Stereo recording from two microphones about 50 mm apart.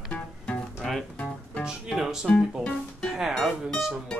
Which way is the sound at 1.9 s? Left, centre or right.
Centre.